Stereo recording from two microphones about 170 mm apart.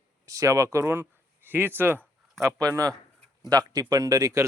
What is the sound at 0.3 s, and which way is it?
A man's voice, 20° right (ahead or behind).